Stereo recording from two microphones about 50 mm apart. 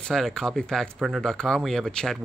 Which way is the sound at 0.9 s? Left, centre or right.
Centre.